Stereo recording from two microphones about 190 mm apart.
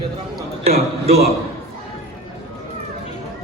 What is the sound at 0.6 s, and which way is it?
Speech, 35° right (ahead or behind).